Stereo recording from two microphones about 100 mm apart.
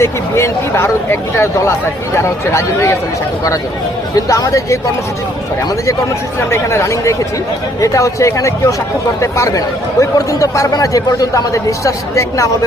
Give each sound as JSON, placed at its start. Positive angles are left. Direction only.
{"t": 0.0, "sound": "speech", "side_deg": 30}
{"t": 4.1, "sound": "a man's voice", "side_deg": 35}
{"t": 6.5, "sound": "a man's voice", "side_deg": 25}